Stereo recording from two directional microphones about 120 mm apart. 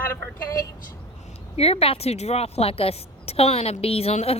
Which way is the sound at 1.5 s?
55° left (ahead or behind).